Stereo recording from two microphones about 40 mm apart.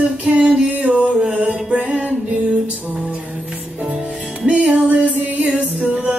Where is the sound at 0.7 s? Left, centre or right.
Right.